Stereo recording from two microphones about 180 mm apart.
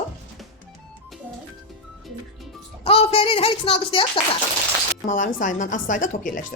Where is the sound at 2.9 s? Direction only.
30° left (ahead or behind).